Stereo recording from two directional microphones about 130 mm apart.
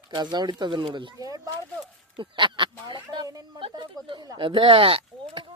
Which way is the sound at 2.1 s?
40° right (ahead or behind).